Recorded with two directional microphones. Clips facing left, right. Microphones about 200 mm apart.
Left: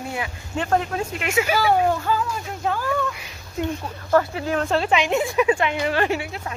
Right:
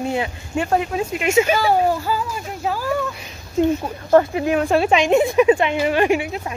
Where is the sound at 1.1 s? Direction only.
25° right (ahead or behind).